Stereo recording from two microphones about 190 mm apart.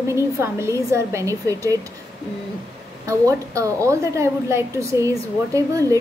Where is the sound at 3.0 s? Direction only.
15° right (ahead or behind).